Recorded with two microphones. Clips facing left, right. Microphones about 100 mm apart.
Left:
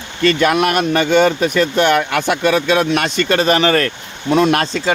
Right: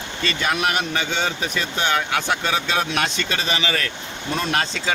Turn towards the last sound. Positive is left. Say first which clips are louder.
# left 8 dB
turn(degrees=60)  # may be behind; listen again after turning